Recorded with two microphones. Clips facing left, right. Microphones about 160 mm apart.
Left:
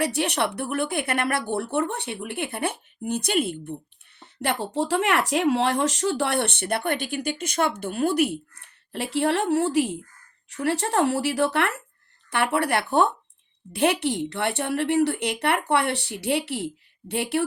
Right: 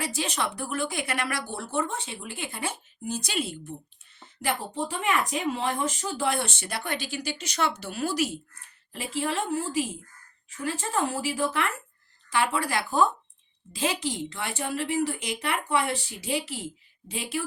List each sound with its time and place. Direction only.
0.0 s speech: 65° left (ahead or behind)
4.2 s speech: 65° left (ahead or behind)